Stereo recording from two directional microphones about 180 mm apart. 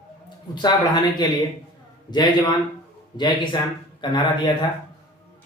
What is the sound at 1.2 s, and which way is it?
Speech, 25° left (ahead or behind).